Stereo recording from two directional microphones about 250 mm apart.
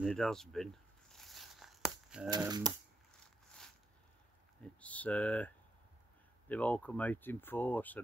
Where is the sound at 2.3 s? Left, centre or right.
Centre.